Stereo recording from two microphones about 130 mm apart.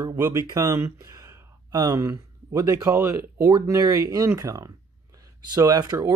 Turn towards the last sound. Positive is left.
turn(degrees=-30)  # may be behind; listen again after turning